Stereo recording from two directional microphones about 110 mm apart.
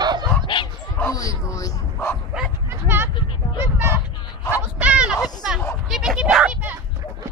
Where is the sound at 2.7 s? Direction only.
20° right (ahead or behind).